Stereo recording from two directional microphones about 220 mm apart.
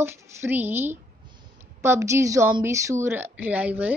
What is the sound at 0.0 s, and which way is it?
A woman's voice, 10° right (ahead or behind).